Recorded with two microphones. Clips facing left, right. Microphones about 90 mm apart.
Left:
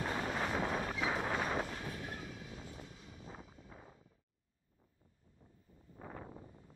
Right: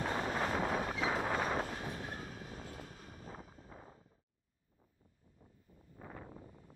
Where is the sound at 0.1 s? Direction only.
35° right (ahead or behind).